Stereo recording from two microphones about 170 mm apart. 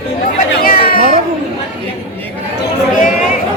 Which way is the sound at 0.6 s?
55° left (ahead or behind).